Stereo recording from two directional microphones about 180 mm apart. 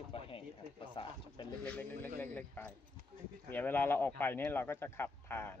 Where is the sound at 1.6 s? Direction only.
10° left (ahead or behind).